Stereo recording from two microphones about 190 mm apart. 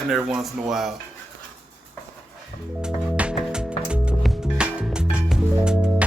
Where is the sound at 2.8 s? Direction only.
5° right (ahead or behind).